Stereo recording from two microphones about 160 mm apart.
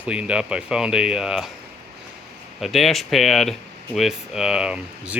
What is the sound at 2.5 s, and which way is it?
Speech, centre (ahead or behind).